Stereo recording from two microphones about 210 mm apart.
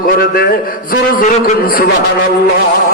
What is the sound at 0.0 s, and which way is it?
A man's voice, 45° left (ahead or behind).